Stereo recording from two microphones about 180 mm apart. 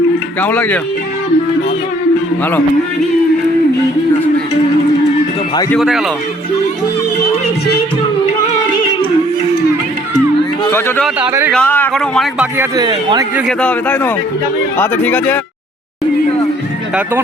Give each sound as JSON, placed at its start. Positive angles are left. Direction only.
{"t": 0.4, "sound": "speech", "side_deg": 10}
{"t": 5.8, "sound": "speech", "side_deg": -5}
{"t": 10.7, "sound": "speech", "side_deg": 10}
{"t": 11.3, "sound": "speech", "side_deg": -15}
{"t": 11.5, "sound": "speech", "side_deg": 10}
{"t": 12.5, "sound": "speech", "side_deg": -20}
{"t": 13.6, "sound": "speech", "side_deg": 5}